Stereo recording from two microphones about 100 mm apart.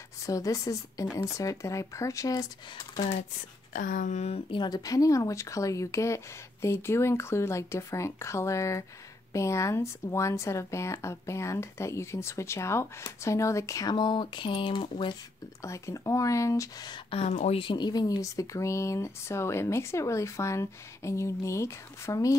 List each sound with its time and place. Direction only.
0.3 s speech: 35° left (ahead or behind)
4.5 s speech: 45° left (ahead or behind)
13.9 s speech: 50° left (ahead or behind)
15.6 s speech: 30° left (ahead or behind)
17.1 s speech: 90° left
17.7 s speech: 45° left (ahead or behind)